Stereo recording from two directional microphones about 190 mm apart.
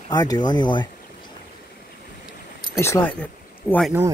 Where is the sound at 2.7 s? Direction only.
15° left (ahead or behind).